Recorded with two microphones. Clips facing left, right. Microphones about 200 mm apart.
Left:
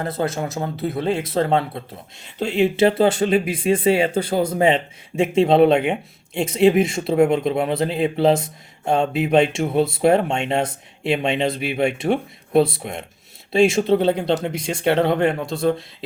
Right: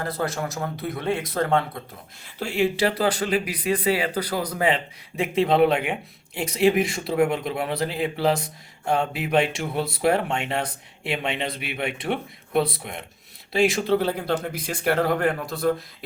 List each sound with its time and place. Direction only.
0.0 s speech: 25° left (ahead or behind)